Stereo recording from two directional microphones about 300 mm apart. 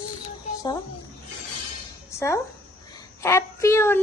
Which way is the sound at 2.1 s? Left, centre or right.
Centre.